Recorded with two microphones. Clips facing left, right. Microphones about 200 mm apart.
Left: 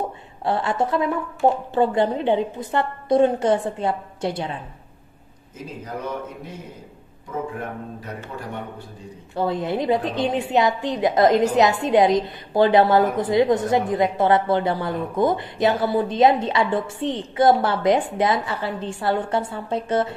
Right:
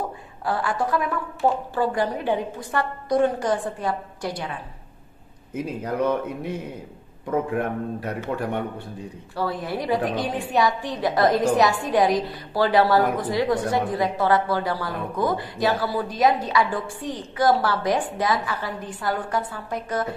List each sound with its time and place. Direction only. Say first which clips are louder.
0.0 s a woman's voice: left 3 dB; 25° left (ahead or behind)
7.2 s speech: right 5 dB; 60° right (ahead or behind)
9.3 s a woman's voice: left 4 dB; 20° left (ahead or behind)